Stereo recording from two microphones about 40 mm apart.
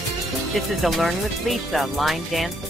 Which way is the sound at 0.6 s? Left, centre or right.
Centre.